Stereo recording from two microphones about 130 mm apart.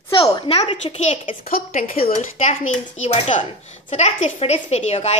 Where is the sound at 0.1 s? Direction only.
45° left (ahead or behind).